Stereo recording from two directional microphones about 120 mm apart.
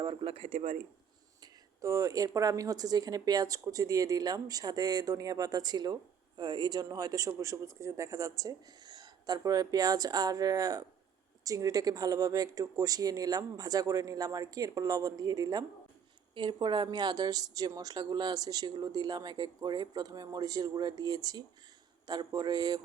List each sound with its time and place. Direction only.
0.0 s a sound: 40° right (ahead or behind)
1.8 s speech: 25° right (ahead or behind)
16.3 s speech: 45° right (ahead or behind)